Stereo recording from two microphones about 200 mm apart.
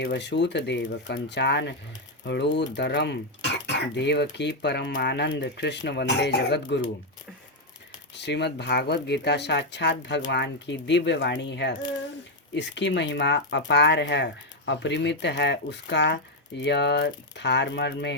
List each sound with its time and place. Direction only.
0.0 s speech: 60° left (ahead or behind)
8.1 s speech: 60° left (ahead or behind)